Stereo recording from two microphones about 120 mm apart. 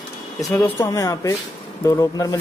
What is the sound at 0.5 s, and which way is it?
Speech, 25° left (ahead or behind).